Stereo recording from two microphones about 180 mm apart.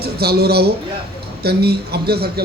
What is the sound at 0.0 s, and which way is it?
A man's voice, 60° right (ahead or behind).